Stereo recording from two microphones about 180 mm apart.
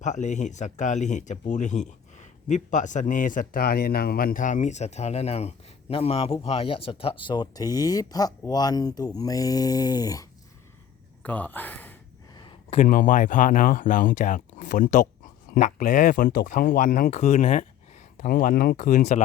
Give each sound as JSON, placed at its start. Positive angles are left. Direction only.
{"t": 0.0, "sound": "speech", "side_deg": 40}
{"t": 11.2, "sound": "speech", "side_deg": 10}
{"t": 12.3, "sound": "a sound", "side_deg": 25}
{"t": 12.8, "sound": "speech", "side_deg": 45}